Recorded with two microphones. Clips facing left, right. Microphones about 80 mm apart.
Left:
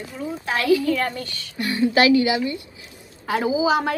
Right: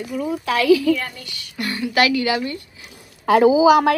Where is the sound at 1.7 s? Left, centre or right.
Left.